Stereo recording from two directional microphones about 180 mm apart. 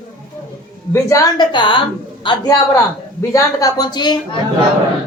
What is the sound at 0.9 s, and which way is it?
Speech, 20° left (ahead or behind).